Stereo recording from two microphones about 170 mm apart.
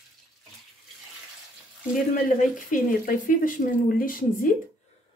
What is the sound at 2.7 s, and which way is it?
Speech, 55° left (ahead or behind).